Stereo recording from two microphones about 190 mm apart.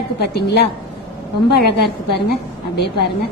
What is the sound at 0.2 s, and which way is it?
A woman's voice, 60° left (ahead or behind).